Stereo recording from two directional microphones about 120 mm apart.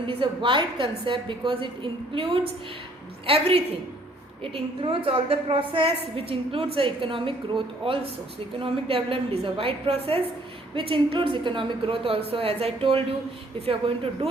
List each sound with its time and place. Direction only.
0.1 s a woman's voice: 45° right (ahead or behind)